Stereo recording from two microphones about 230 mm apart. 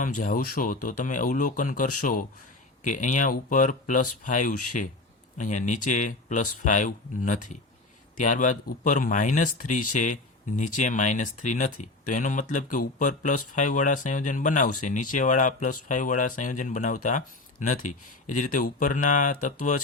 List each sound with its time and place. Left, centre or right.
0.0 s speech: left